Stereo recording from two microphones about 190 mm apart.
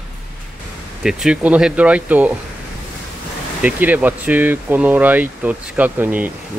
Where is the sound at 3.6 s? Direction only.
10° right (ahead or behind).